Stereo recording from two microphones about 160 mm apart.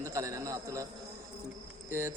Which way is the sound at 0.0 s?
20° right (ahead or behind).